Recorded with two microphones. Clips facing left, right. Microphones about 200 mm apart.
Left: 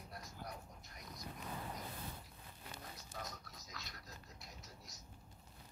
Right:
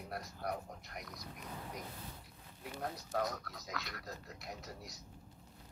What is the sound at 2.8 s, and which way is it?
Speech, 70° right (ahead or behind).